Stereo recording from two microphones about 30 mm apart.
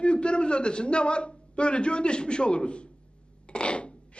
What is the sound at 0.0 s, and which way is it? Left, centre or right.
A man's voice, left.